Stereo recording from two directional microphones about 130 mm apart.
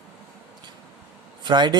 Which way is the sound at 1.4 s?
35° right (ahead or behind).